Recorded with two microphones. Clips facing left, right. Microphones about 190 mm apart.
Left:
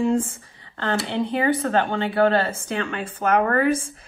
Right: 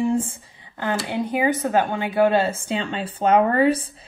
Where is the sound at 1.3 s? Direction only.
10° right (ahead or behind).